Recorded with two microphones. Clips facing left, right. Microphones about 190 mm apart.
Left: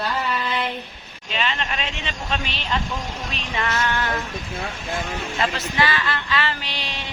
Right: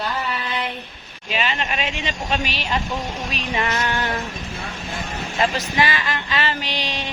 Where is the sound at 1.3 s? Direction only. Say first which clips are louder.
Right 2 dB; 10° right (ahead or behind).